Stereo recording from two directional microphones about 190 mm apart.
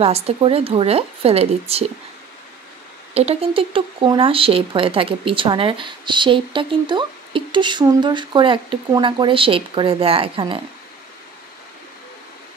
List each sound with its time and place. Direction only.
0.0 s speech: 30° right (ahead or behind)
3.2 s speech: 30° right (ahead or behind)